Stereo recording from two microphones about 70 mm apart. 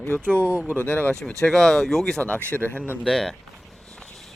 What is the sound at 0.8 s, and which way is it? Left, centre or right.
Speech, left.